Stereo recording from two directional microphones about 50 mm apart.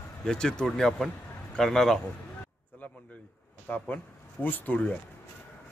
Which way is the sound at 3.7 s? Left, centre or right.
Left.